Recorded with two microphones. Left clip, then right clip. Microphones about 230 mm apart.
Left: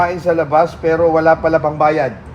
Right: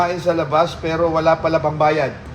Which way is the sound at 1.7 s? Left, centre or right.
Left.